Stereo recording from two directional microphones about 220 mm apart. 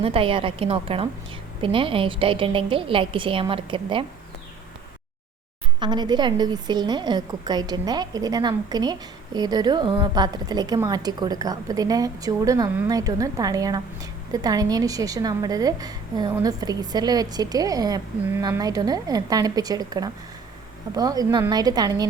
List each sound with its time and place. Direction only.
0.0 s a woman's voice: 25° right (ahead or behind)
5.8 s a woman's voice: 20° right (ahead or behind)